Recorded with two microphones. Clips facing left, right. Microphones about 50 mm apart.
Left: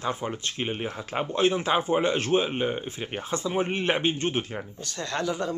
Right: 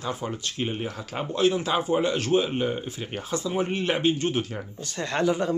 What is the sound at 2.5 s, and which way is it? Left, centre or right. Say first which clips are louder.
Speech: right 1 dB; centre.